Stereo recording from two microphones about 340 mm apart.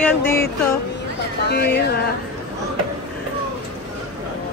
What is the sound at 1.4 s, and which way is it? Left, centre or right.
Speech, left.